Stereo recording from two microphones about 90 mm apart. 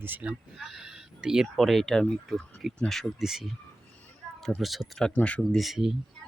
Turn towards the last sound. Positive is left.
turn(degrees=-5)  # may be behind; listen again after turning